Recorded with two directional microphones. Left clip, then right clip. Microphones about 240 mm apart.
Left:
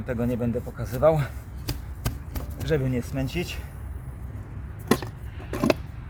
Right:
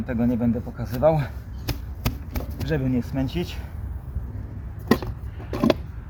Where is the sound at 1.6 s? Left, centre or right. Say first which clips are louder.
Right 4 dB; centre.